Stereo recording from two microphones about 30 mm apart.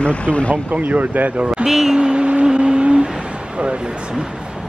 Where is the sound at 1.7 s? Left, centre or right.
Centre.